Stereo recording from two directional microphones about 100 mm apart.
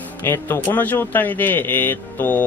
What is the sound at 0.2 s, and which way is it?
Speech, 20° left (ahead or behind).